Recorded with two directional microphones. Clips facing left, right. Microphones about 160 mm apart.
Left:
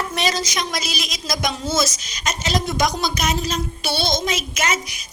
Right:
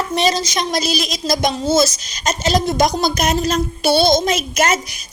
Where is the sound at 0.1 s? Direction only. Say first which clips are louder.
Right 5 dB; 25° right (ahead or behind).